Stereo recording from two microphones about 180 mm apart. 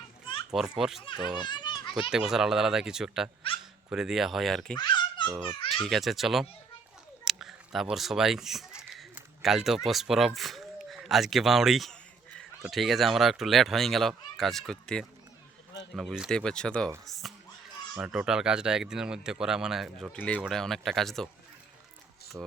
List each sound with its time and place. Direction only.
0.5 s speech: centre (ahead or behind)
1.4 s children playing: 25° left (ahead or behind)
2.0 s speech: 5° right (ahead or behind)
4.8 s babbling: 25° left (ahead or behind)
5.7 s speech: centre (ahead or behind)
17.1 s a sound: centre (ahead or behind)
17.9 s speech: 5° right (ahead or behind)
20.1 s speech: 10° left (ahead or behind)
22.3 s speech: 5° right (ahead or behind)